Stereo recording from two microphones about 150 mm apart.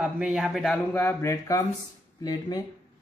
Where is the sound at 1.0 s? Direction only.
15° left (ahead or behind).